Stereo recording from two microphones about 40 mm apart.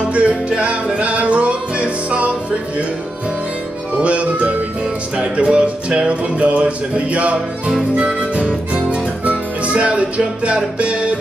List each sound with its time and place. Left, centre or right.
0.1 s music: right
4.0 s music: right